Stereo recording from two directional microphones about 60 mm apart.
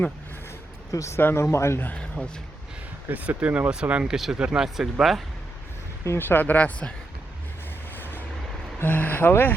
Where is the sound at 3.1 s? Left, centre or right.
Right; by 5.2 s centre.